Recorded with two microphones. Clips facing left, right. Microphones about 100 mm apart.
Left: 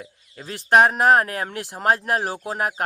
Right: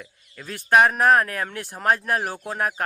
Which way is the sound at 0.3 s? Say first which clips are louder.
Left 1 dB; 30° left (ahead or behind).